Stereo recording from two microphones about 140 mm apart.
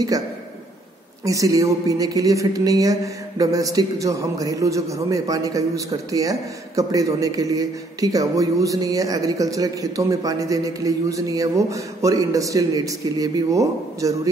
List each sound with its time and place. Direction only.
1.2 s speech: 25° right (ahead or behind)